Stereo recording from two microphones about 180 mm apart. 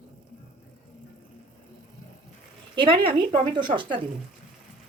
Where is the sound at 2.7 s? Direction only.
30° right (ahead or behind).